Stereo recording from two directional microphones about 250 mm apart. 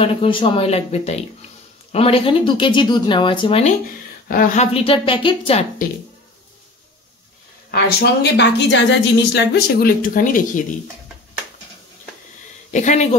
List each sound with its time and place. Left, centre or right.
0.0 s speech: left
4.3 s speech: left
7.7 s a woman's voice: left
12.7 s speech: left